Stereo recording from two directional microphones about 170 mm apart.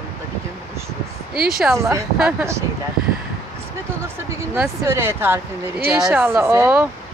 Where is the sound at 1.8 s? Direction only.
15° right (ahead or behind).